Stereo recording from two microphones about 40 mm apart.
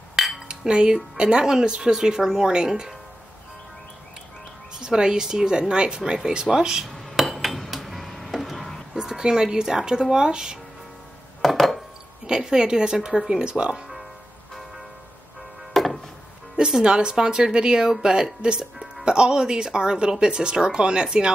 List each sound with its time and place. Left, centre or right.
0.1 s cutlery: centre
0.5 s a woman's voice: right
4.7 s a woman's voice: centre
7.2 s cutlery: centre
8.9 s speech: centre
11.4 s a sound: centre
12.3 s a woman's voice: centre
15.7 s wood: centre
16.5 s speech: centre